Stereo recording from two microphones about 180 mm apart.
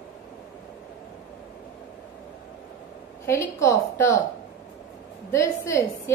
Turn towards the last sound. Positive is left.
turn(degrees=15)  # may be behind; listen again after turning